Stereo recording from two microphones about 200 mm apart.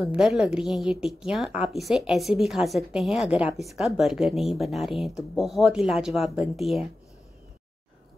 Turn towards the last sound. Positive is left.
turn(degrees=0)  # may be behind; listen again after turning